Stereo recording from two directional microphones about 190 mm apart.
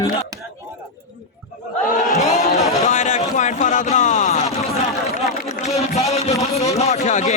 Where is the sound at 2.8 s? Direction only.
40° left (ahead or behind).